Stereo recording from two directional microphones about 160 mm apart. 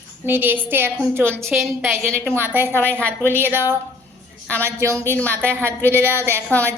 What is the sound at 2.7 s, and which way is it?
Speech, 10° left (ahead or behind).